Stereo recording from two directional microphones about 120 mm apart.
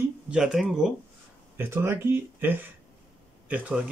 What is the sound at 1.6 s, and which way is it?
A man's voice, 20° right (ahead or behind).